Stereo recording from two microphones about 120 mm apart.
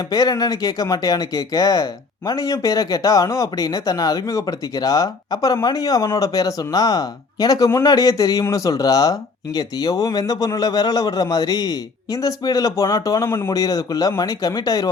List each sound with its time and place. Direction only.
0.1 s speech: 35° left (ahead or behind)